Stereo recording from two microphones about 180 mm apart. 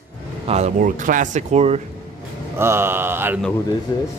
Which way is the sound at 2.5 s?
15° right (ahead or behind).